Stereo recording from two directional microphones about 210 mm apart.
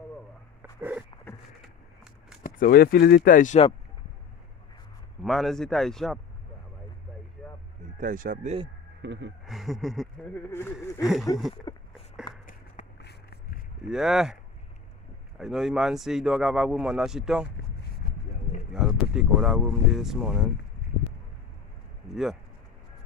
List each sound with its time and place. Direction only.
0.6 s dog: 10° right (ahead or behind)
2.4 s speech: 45° left (ahead or behind)
5.2 s speech: centre (ahead or behind)
8.0 s speech: 40° right (ahead or behind)
9.0 s speech: 60° right (ahead or behind)
9.5 s speech: centre (ahead or behind)
11.7 s a sound: 20° left (ahead or behind)
12.4 s walk: 45° left (ahead or behind)
13.8 s speech: centre (ahead or behind)
18.0 s a sound: 45° left (ahead or behind)
18.7 s speech: 5° right (ahead or behind)
22.1 s speech: centre (ahead or behind)